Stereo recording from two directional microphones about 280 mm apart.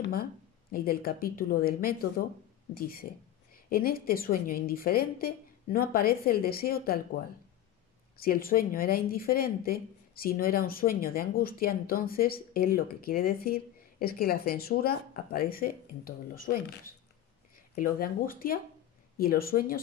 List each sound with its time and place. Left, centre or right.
0.0 s speech: left
8.2 s speech: left